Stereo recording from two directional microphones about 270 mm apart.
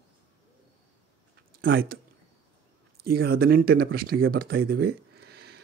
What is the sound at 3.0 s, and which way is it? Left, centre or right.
Speech, right.